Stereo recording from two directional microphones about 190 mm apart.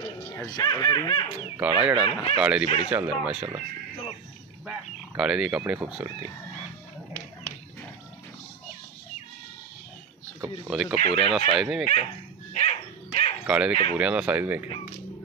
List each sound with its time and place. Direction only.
0.0 s speech: 20° left (ahead or behind)
1.6 s speech: 5° right (ahead or behind)
2.0 s speech: 25° left (ahead or behind)
2.3 s speech: 5° right (ahead or behind)
10.7 s speech: centre (ahead or behind)
12.5 s dog: 35° left (ahead or behind)
13.5 s speech: 5° right (ahead or behind)